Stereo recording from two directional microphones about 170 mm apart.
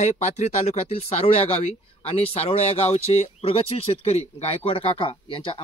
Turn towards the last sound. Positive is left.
turn(degrees=30)  # may be behind; listen again after turning